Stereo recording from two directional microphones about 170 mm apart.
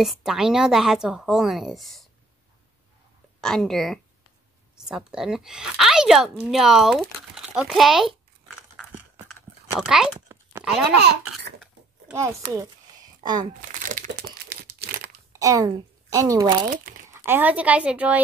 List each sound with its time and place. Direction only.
0.0 s a woman's voice: centre (ahead or behind)
3.3 s a woman's voice: 5° left (ahead or behind)
8.8 s a sound: 5° left (ahead or behind)
11.0 s speech: 80° right
12.1 s a woman's voice: 15° right (ahead or behind)
12.5 s a sound: 20° right (ahead or behind)
13.4 s crumpling: 50° right (ahead or behind)
14.5 s crumpling: 75° right (ahead or behind)
15.3 s a woman's voice: 20° right (ahead or behind)